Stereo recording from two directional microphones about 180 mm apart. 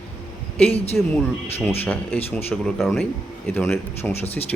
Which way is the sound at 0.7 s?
35° left (ahead or behind).